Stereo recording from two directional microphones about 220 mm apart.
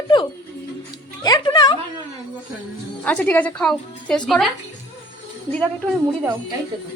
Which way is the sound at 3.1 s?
5° left (ahead or behind).